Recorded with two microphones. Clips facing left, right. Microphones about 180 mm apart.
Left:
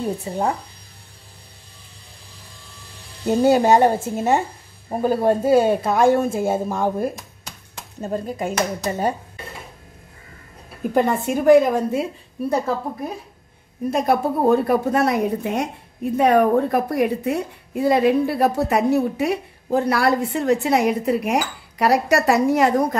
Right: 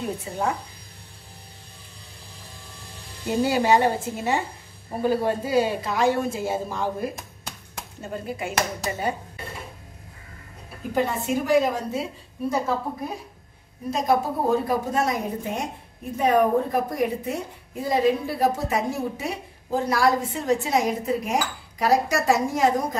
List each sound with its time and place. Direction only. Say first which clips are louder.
0.2 s speech: left 4 dB; 35° left (ahead or behind)
3.3 s speech: left 5 dB; 45° left (ahead or behind)
8.0 s speech: left 6 dB; 40° left (ahead or behind)
11.0 s a woman's voice: left 4 dB; 55° left (ahead or behind)
13.8 s a woman's voice: left 3 dB; 60° left (ahead or behind)